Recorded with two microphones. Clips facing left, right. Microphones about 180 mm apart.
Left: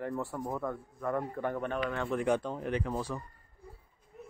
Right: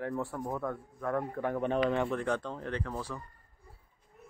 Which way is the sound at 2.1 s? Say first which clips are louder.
Left 3 dB; 10° left (ahead or behind).